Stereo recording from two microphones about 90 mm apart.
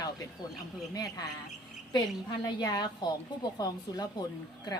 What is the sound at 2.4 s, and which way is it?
Speech, 50° left (ahead or behind).